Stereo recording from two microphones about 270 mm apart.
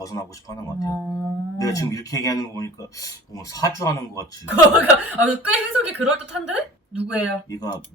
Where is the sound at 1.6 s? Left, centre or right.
Centre.